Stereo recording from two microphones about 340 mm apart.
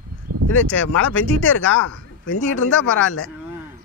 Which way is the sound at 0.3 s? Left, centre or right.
Right.